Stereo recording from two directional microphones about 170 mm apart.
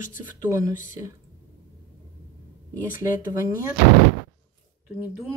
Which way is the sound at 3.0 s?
15° right (ahead or behind).